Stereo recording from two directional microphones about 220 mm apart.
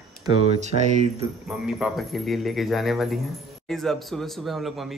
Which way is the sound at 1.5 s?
Centre (ahead or behind).